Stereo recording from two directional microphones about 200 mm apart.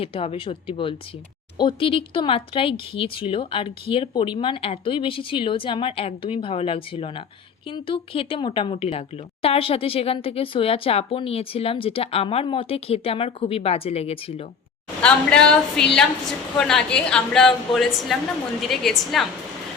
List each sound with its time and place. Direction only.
0.0 s a woman's voice: 30° left (ahead or behind)
15.0 s a woman's voice: 5° left (ahead or behind)